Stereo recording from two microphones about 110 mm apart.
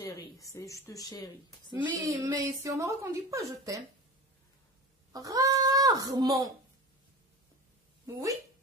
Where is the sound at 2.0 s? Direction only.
30° right (ahead or behind).